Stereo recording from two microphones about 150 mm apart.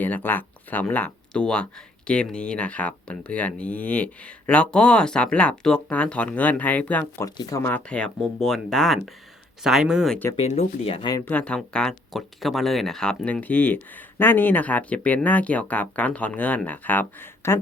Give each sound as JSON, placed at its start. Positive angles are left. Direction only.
{"t": 0.0, "sound": "speech", "side_deg": 10}
{"t": 7.3, "sound": "speech", "side_deg": 25}
{"t": 10.3, "sound": "speech", "side_deg": 45}
{"t": 11.3, "sound": "speech", "side_deg": 10}